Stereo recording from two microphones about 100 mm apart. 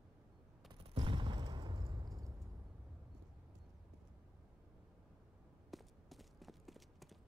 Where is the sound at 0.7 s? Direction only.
65° right (ahead or behind).